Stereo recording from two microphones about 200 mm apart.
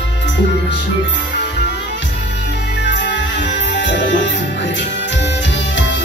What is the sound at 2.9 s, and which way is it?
Music, 60° left (ahead or behind).